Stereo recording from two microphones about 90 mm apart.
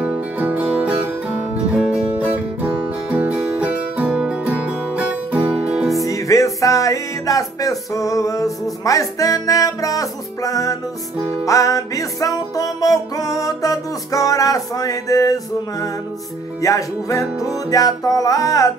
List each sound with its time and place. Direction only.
0.0 s music: 15° right (ahead or behind)
6.0 s music: 40° left (ahead or behind)